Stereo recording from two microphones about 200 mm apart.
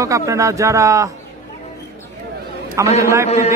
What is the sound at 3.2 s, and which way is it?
Speech, 30° left (ahead or behind).